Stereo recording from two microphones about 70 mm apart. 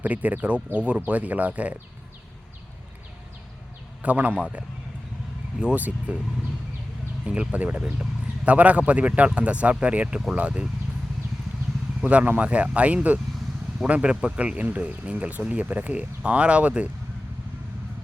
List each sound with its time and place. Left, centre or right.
0.0 s speech: right
4.0 s speech: right
7.3 s speech: centre
12.0 s speech: right